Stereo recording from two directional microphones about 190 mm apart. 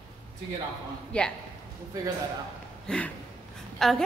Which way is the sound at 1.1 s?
5° left (ahead or behind).